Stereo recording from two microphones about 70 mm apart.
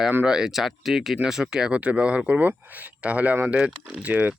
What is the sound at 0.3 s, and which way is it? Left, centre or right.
Speech, centre.